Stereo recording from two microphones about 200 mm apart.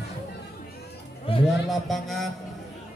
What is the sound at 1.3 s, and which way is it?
Speech, 25° left (ahead or behind).